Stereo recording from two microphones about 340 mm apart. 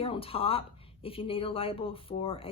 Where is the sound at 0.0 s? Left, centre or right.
Centre.